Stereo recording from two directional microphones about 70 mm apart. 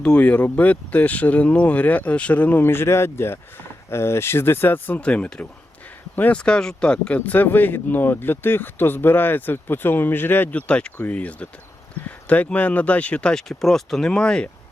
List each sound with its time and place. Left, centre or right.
0.0 s speech: centre
4.9 s speech: centre
10.7 s speech: centre